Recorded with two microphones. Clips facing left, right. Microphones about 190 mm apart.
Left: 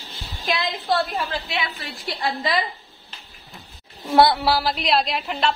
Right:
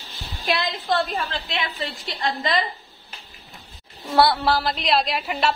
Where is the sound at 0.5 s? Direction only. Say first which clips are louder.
Even; centre (ahead or behind).